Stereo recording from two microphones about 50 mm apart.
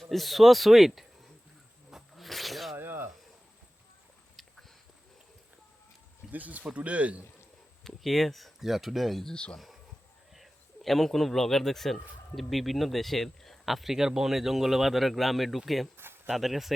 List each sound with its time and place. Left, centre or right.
0.0 s speech: centre
1.9 s zipper: centre
2.7 s a sound: right
6.3 s speech: right
7.9 s speech: centre
9.3 s speech: left
10.3 s a man's voice: centre